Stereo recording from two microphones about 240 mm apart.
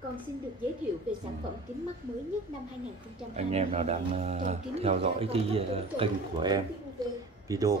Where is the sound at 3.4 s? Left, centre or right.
Right.